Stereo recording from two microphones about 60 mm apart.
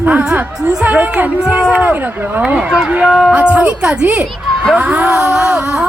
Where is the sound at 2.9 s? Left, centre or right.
Centre.